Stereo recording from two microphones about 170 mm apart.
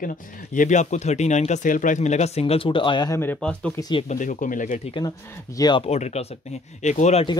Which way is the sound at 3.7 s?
25° left (ahead or behind).